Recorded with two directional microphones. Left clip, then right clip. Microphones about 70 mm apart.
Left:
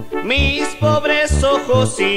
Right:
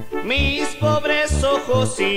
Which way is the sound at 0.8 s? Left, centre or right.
Left.